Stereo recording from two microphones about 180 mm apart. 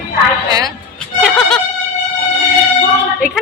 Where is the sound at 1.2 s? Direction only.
5° left (ahead or behind).